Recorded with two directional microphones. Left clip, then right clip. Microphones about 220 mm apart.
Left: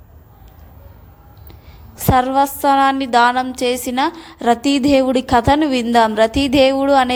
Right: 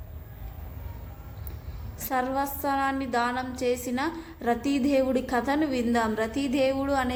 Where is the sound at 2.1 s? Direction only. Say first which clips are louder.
Left 13 dB; 35° left (ahead or behind).